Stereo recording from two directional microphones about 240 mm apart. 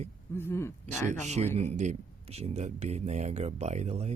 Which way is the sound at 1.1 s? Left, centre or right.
Right.